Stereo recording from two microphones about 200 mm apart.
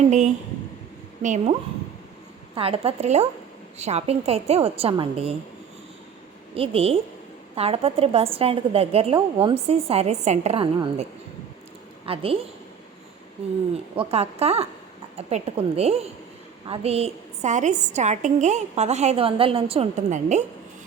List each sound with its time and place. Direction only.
0.1 s a woman's voice: 35° right (ahead or behind)
2.6 s a woman's voice: 30° right (ahead or behind)
6.5 s a woman's voice: 30° right (ahead or behind)
12.0 s a woman's voice: 30° right (ahead or behind)
13.9 s a woman's voice: 30° right (ahead or behind)